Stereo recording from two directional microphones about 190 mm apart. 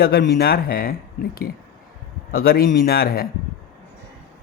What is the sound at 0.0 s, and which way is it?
Speech, 55° left (ahead or behind).